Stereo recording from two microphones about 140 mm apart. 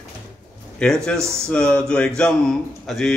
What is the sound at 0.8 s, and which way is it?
A man's voice, 5° left (ahead or behind).